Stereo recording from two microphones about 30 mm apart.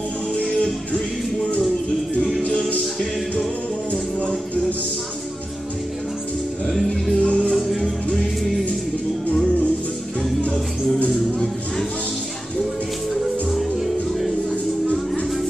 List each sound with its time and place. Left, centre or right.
0.6 s music: left
2.8 s music: centre
7.2 s music: left
13.1 s music: centre